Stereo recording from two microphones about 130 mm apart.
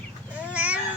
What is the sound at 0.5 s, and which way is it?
Cat, 10° right (ahead or behind).